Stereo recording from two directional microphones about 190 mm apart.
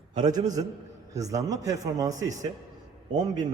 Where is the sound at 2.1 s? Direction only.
40° right (ahead or behind).